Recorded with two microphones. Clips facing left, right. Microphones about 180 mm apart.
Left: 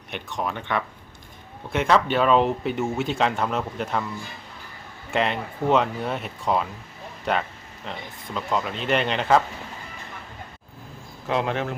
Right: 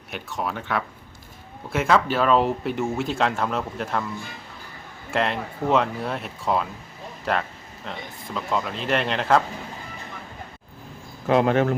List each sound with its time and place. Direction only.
0.1 s speech: 5° right (ahead or behind)
5.1 s speech: centre (ahead or behind)
11.3 s speech: 45° right (ahead or behind)